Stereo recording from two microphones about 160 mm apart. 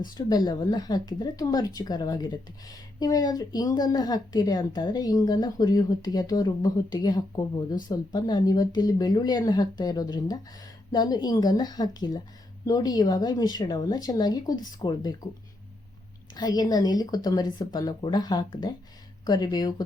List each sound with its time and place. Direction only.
0.1 s speech: 25° left (ahead or behind)
16.3 s speech: 25° left (ahead or behind)